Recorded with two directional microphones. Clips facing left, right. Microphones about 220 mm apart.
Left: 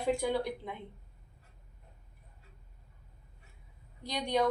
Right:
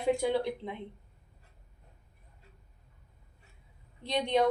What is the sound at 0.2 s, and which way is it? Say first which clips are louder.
Speech: right 3 dB; 20° right (ahead or behind).